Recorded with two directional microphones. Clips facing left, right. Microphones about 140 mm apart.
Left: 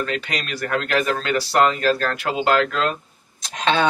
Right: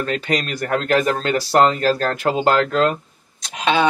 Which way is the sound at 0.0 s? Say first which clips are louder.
Right 4 dB; 40° right (ahead or behind).